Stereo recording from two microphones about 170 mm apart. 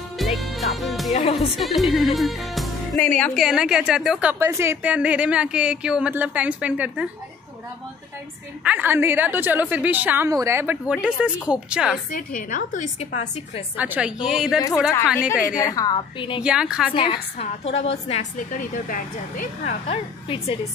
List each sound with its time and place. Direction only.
0.2 s music: centre (ahead or behind)
1.1 s a woman's voice: 35° left (ahead or behind)
1.5 s a woman's voice: centre (ahead or behind)
3.3 s a woman's voice: 5° right (ahead or behind)
8.6 s a woman's voice: 10° right (ahead or behind)
12.4 s a woman's voice: 50° left (ahead or behind)
13.7 s a woman's voice: 10° right (ahead or behind)
15.2 s a woman's voice: 55° left (ahead or behind)
15.6 s a woman's voice: 20° left (ahead or behind)
16.4 s speech: 5° right (ahead or behind)
16.9 s a woman's voice: 30° left (ahead or behind)
18.6 s a woman's voice: 55° left (ahead or behind)
19.9 s a woman's voice: 35° left (ahead or behind)